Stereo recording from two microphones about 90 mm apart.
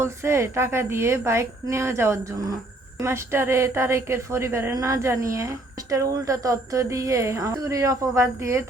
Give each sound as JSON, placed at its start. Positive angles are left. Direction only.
{"t": 0.0, "sound": "a woman's voice", "side_deg": -30}